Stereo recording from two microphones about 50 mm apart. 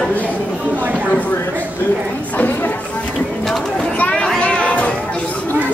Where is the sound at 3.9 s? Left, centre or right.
Left.